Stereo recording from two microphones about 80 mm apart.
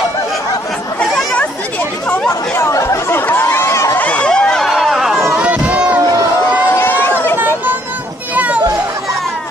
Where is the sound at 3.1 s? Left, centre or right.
Left.